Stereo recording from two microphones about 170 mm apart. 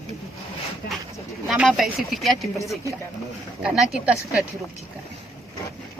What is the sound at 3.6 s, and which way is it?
Speech, 5° right (ahead or behind).